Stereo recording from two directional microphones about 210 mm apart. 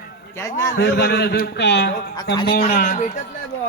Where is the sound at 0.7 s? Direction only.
50° left (ahead or behind).